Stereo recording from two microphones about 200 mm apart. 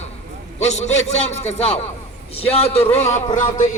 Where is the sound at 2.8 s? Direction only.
10° left (ahead or behind).